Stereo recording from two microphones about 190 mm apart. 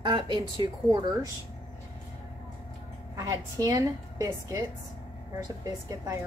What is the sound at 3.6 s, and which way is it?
A woman's voice, 15° right (ahead or behind).